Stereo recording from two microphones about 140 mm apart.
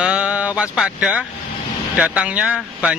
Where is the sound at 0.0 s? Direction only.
5° right (ahead or behind).